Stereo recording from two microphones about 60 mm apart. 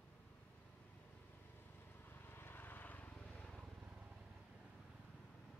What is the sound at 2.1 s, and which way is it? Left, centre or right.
Vehicle, left.